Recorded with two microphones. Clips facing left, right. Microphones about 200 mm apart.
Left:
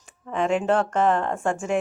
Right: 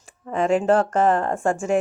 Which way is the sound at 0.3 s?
40° right (ahead or behind).